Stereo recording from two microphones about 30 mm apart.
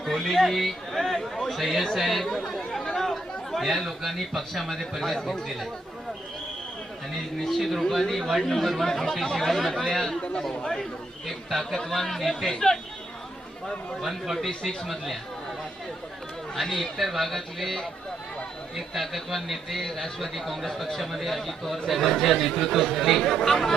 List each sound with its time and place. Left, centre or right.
0.0 s a man's voice: centre
2.2 s speech: centre
2.8 s chatter: centre
3.1 s a man's voice: centre
7.4 s speech: centre
10.2 s speech: left
11.3 s speech: centre
12.5 s speech: left
14.0 s speech: centre
14.3 s speech: centre
16.6 s speech: centre
18.9 s speech: centre